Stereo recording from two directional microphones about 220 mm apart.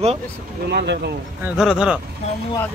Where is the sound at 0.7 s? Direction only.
50° right (ahead or behind).